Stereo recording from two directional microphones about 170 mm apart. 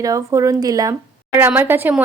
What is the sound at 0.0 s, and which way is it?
Speech, 20° right (ahead or behind).